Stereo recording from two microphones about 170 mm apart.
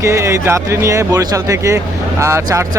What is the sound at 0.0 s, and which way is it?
Speech, 15° right (ahead or behind).